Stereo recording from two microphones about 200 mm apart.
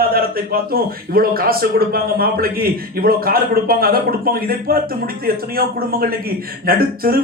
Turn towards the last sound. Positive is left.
turn(degrees=-50)  # may be behind; listen again after turning